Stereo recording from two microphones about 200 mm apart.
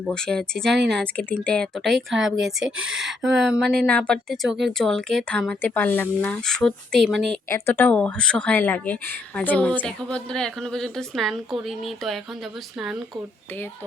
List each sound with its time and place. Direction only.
0.1 s speech: 5° left (ahead or behind)
2.6 s speech: 75° right (ahead or behind)
2.9 s speech: centre (ahead or behind)